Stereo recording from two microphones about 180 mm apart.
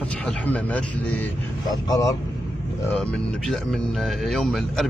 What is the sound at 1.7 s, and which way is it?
Speech, 20° left (ahead or behind).